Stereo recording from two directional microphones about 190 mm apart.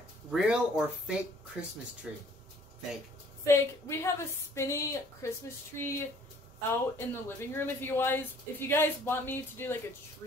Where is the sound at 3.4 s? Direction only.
15° left (ahead or behind).